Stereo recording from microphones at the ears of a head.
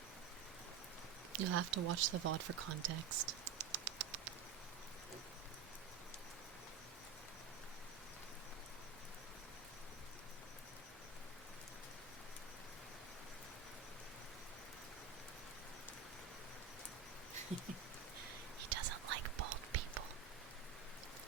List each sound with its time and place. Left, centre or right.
1.3 s speech: right
18.2 s whispering: right